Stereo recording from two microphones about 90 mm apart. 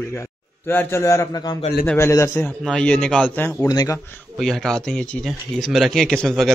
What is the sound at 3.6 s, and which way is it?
Speech, 40° left (ahead or behind).